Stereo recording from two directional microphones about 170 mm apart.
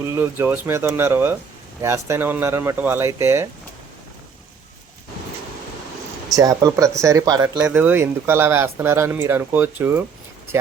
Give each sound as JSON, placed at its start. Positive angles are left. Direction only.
{"t": 0.0, "sound": "speech", "side_deg": -15}
{"t": 6.3, "sound": "speech", "side_deg": -20}
{"t": 7.6, "sound": "speech", "side_deg": -10}